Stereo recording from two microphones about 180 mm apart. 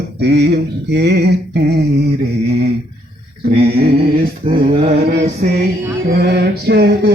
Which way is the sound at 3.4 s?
60° right (ahead or behind).